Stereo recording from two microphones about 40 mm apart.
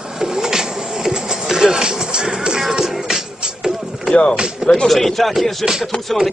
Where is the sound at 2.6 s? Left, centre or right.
Centre.